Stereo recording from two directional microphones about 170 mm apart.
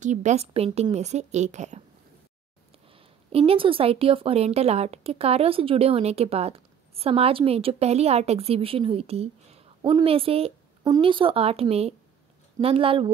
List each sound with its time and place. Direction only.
0.0 s a woman's voice: 45° right (ahead or behind)
2.9 s a woman's voice: 35° right (ahead or behind)